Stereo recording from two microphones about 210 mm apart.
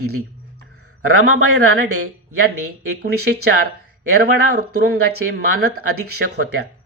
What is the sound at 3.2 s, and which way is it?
Speech, 50° right (ahead or behind).